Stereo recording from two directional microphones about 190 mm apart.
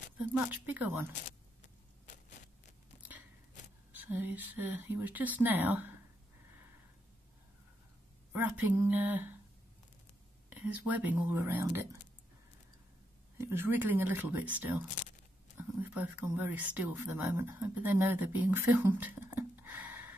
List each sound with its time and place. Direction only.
0.3 s speech: 10° right (ahead or behind)
1.2 s vehicle: 40° left (ahead or behind)
3.9 s speech: 10° right (ahead or behind)
8.3 s speech: 10° right (ahead or behind)
10.5 s speech: 10° right (ahead or behind)
13.4 s speech: 10° right (ahead or behind)